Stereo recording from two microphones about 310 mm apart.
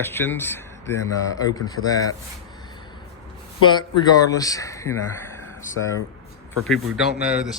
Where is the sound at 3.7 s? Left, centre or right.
Centre.